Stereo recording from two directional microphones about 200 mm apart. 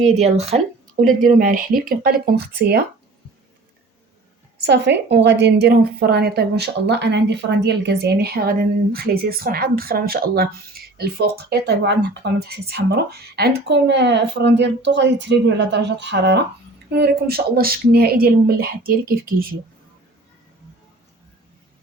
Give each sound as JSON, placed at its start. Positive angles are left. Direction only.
{"t": 0.0, "sound": "a woman's voice", "side_deg": -35}
{"t": 4.6, "sound": "a woman's voice", "side_deg": -60}